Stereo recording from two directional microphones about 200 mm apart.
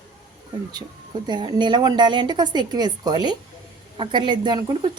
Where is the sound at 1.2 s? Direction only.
20° right (ahead or behind).